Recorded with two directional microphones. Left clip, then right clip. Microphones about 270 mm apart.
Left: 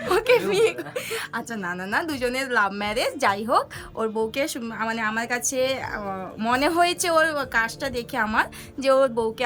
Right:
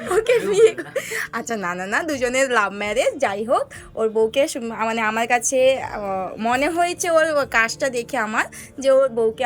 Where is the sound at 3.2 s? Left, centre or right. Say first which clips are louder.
Right 1 dB; left.